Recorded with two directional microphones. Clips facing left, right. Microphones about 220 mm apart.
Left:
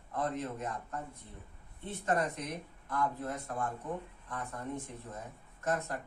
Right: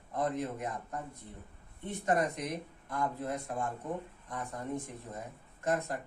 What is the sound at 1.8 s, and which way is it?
Speech, 15° right (ahead or behind).